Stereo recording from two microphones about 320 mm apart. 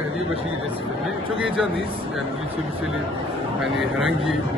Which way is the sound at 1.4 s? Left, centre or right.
Centre.